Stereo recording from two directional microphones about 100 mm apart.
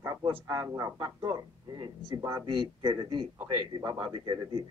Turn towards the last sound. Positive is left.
turn(degrees=-50)  # may be behind; listen again after turning